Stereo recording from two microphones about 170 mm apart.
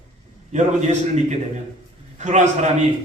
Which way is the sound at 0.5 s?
45° right (ahead or behind).